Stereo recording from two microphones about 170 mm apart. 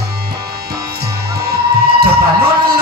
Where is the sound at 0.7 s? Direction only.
70° right (ahead or behind).